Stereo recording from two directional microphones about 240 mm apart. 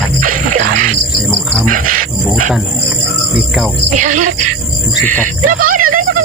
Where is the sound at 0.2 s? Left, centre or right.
Right.